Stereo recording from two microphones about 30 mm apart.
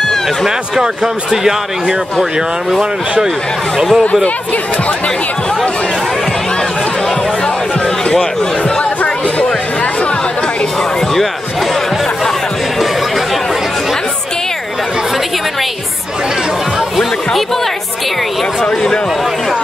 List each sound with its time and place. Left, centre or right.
0.7 s speech: centre
3.7 s speech: centre
4.0 s speech: left